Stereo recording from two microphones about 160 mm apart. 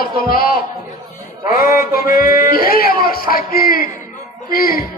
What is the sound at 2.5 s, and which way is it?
A woman's voice, 65° left (ahead or behind).